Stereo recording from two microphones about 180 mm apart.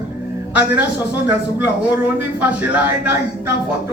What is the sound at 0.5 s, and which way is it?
Speech, 10° right (ahead or behind).